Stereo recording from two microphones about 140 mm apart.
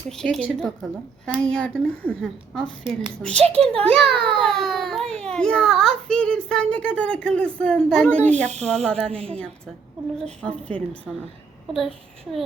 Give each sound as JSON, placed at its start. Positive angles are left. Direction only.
{"t": 0.2, "sound": "a woman's voice", "side_deg": 5}
{"t": 3.4, "sound": "a child's voice", "side_deg": -45}
{"t": 4.6, "sound": "baby cry", "side_deg": 0}
{"t": 5.2, "sound": "a child's voice", "side_deg": 5}
{"t": 9.1, "sound": "a child's voice", "side_deg": -45}
{"t": 10.4, "sound": "a child's voice", "side_deg": 10}